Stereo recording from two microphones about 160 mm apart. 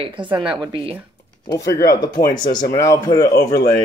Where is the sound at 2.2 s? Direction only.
60° left (ahead or behind).